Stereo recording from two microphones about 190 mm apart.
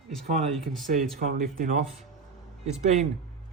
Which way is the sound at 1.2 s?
45° right (ahead or behind).